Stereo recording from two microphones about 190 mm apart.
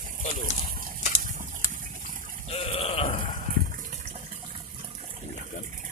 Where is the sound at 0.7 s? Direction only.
45° right (ahead or behind).